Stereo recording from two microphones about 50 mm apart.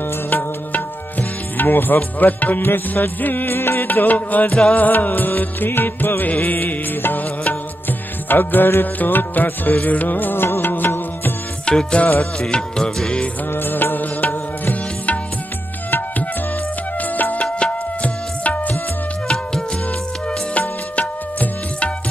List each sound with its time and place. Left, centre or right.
0.3 s music: left
11.6 s music: left
13.6 s music: left
17.2 s music: left
19.2 s music: centre
20.5 s music: left